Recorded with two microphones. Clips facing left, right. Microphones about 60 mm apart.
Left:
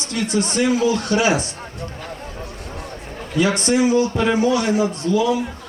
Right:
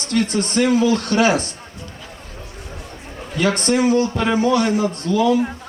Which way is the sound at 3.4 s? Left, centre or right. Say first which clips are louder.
Right 2 dB; centre.